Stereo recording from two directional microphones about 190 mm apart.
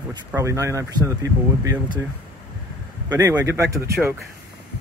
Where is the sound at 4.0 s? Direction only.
5° right (ahead or behind).